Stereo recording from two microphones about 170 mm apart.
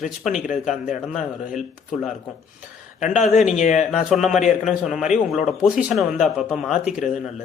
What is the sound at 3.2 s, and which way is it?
Speech, 40° left (ahead or behind).